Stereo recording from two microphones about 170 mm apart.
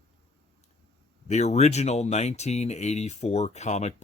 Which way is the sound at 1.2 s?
40° left (ahead or behind).